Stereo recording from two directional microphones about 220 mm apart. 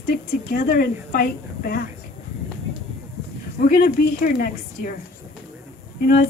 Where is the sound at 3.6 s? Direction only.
35° left (ahead or behind).